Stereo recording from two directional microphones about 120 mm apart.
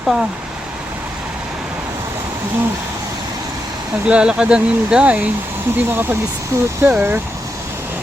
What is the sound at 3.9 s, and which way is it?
Speech, 10° right (ahead or behind).